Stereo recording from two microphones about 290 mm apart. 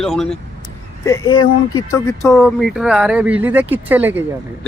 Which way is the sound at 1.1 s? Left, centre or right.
Centre.